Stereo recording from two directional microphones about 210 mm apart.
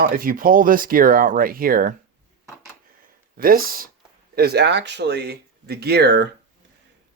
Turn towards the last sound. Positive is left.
turn(degrees=-50)  # may be behind; listen again after turning